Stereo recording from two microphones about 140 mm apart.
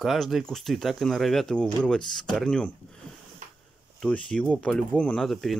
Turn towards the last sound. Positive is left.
turn(degrees=5)  # may be behind; listen again after turning